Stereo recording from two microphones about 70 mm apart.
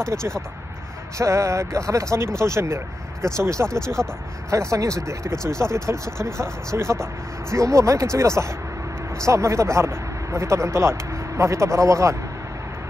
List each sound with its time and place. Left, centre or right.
1.1 s speech: right
3.6 s speech: centre
4.5 s speech: right